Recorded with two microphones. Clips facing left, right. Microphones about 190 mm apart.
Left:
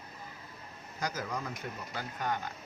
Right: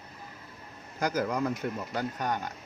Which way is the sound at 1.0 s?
60° right (ahead or behind).